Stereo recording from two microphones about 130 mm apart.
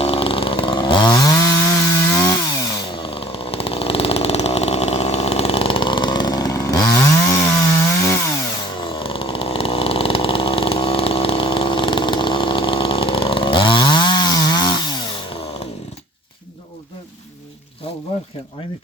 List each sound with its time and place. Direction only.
0.0 s chainsaw: 45° left (ahead or behind); by 2.8 s 25° left (ahead or behind)
2.9 s chainsaw: 45° left (ahead or behind); by 7.3 s 25° left (ahead or behind)
8.8 s chainsaw: 40° left (ahead or behind)